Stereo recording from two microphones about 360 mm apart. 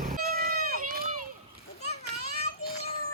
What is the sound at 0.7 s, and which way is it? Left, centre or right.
Run, right.